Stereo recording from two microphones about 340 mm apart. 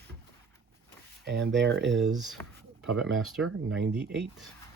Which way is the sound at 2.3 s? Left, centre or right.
Centre.